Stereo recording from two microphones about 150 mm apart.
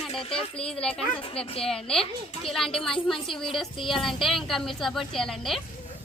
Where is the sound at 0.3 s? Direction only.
5° left (ahead or behind).